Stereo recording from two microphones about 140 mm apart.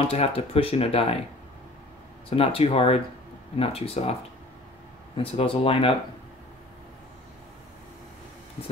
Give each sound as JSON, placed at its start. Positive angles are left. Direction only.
{"t": 0.1, "sound": "speech", "side_deg": 45}
{"t": 2.2, "sound": "speech", "side_deg": 40}